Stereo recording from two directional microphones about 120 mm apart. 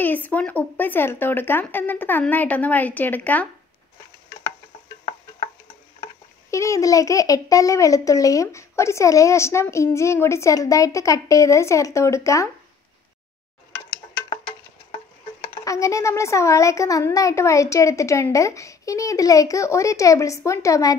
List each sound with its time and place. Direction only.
0.0 s speech: 15° left (ahead or behind)
6.5 s a child's voice: 25° left (ahead or behind)
15.6 s a child's voice: 25° left (ahead or behind)